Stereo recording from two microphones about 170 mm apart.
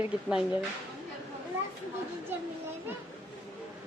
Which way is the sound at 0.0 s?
5° right (ahead or behind).